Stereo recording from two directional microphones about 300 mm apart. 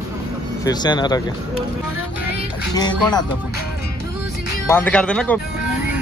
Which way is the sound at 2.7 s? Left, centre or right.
Centre.